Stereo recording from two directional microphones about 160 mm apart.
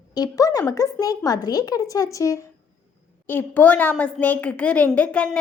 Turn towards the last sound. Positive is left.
turn(degrees=10)  # may be behind; listen again after turning